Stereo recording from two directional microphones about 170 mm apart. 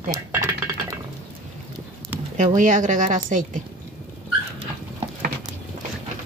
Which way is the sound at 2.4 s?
50° right (ahead or behind).